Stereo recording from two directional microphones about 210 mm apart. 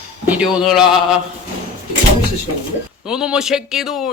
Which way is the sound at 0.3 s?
5° right (ahead or behind).